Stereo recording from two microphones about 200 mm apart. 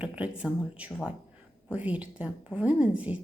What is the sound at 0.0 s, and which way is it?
A woman's voice, 5° right (ahead or behind).